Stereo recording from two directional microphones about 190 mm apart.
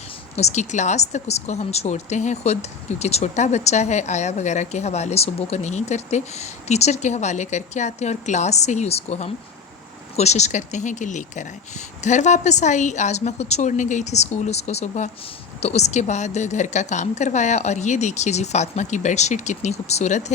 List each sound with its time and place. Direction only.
0.3 s speech: 35° left (ahead or behind)